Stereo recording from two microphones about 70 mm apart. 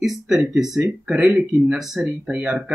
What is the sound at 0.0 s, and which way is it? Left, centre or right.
Speech, centre.